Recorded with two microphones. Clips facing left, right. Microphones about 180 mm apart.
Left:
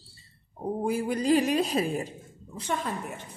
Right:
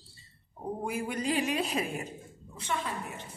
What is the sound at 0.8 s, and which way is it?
A woman's voice, 35° left (ahead or behind).